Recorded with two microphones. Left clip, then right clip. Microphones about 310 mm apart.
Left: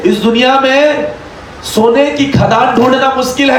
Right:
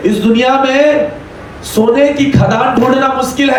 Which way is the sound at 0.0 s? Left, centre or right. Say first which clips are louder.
Left 2 dB; left.